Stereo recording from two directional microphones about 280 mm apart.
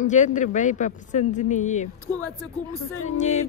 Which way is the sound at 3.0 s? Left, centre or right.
Left.